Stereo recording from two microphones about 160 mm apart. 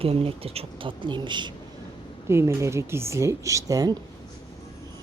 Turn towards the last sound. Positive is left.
turn(degrees=-20)  # may be behind; listen again after turning